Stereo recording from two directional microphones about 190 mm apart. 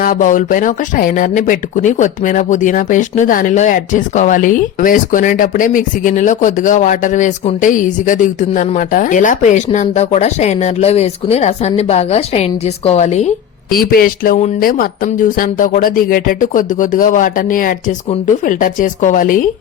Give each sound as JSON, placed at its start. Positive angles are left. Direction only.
{"t": 0.0, "sound": "speech", "side_deg": 45}
{"t": 13.7, "sound": "speech", "side_deg": 50}